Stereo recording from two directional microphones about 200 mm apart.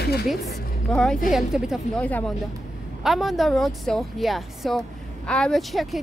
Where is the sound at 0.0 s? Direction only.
50° left (ahead or behind).